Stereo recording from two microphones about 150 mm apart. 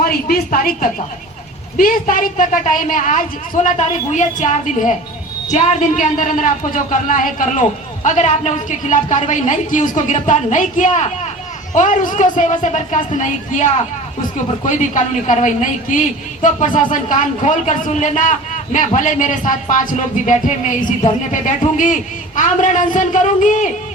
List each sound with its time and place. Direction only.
0.0 s a woman's voice: 90° left; by 23.6 s 55° left (ahead or behind)